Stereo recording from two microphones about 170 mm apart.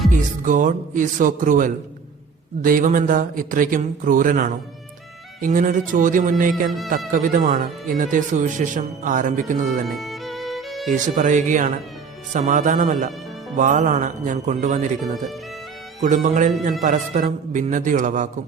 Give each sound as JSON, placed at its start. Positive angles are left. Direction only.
{"t": 0.1, "sound": "speech", "side_deg": -50}
{"t": 6.7, "sound": "speech", "side_deg": 0}
{"t": 7.1, "sound": "speech", "side_deg": -50}
{"t": 9.8, "sound": "music", "side_deg": 0}
{"t": 10.9, "sound": "speech", "side_deg": -50}
{"t": 16.0, "sound": "speech", "side_deg": -45}